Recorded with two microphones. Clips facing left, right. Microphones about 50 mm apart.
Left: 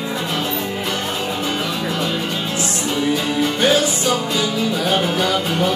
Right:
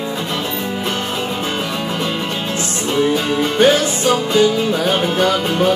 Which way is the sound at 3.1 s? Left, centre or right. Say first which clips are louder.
Right 3 dB; right.